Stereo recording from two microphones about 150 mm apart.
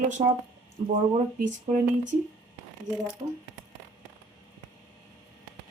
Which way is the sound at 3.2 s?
40° right (ahead or behind).